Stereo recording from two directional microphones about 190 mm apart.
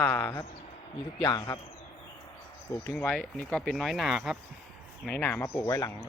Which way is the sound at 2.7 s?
15° left (ahead or behind).